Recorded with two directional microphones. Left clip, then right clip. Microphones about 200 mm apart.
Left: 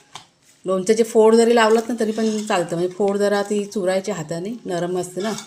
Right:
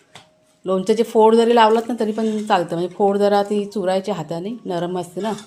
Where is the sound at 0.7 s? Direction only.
Centre (ahead or behind).